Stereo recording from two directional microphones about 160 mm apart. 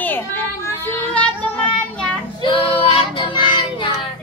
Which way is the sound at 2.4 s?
30° left (ahead or behind).